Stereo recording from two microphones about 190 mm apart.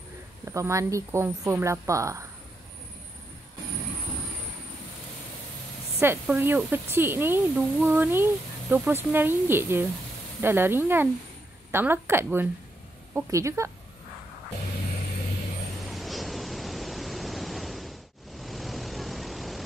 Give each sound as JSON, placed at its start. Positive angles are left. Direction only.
{"t": 0.5, "sound": "speech", "side_deg": -15}
{"t": 5.9, "sound": "speech", "side_deg": -10}
{"t": 15.9, "sound": "pink noise", "side_deg": 0}
{"t": 18.4, "sound": "vehicle", "side_deg": 0}